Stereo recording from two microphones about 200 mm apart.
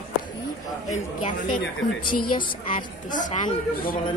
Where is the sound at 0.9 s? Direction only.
35° left (ahead or behind).